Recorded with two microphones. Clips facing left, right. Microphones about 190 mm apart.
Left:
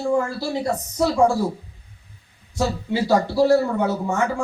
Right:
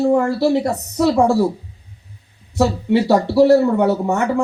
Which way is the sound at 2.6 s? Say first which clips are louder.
Right 7 dB; 65° right (ahead or behind).